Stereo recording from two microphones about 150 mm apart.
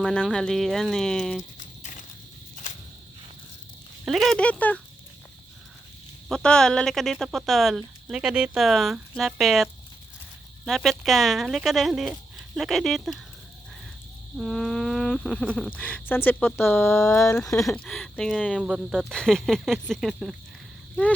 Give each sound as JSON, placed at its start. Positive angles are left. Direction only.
{"t": 0.0, "sound": "speech", "side_deg": 5}
{"t": 1.5, "sound": "horse", "side_deg": 55}
{"t": 4.0, "sound": "speech", "side_deg": 0}
{"t": 6.2, "sound": "speech", "side_deg": 5}
{"t": 10.7, "sound": "speech", "side_deg": 0}
{"t": 14.3, "sound": "speech", "side_deg": 0}
{"t": 17.8, "sound": "speech", "side_deg": 0}